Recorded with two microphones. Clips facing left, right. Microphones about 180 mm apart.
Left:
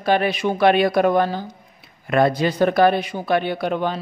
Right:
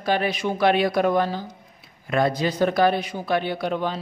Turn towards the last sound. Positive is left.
turn(degrees=60)  # may be behind; listen again after turning